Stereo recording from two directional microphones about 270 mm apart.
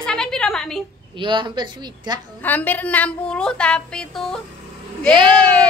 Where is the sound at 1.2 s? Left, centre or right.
Centre.